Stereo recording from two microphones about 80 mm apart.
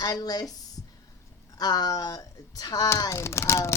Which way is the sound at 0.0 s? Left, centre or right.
Left.